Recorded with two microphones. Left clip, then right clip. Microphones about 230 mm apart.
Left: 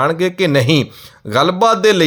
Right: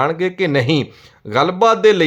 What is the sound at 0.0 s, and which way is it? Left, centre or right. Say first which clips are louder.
Speech: left 2 dB; centre.